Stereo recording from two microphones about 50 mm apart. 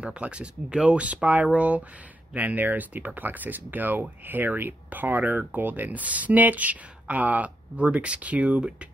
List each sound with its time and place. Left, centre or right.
0.0 s speech: right